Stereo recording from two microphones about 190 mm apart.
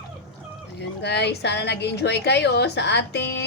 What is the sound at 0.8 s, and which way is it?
A woman's voice, 65° left (ahead or behind).